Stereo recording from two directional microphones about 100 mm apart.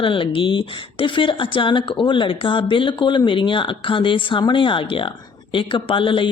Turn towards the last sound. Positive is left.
turn(degrees=60)  # may be behind; listen again after turning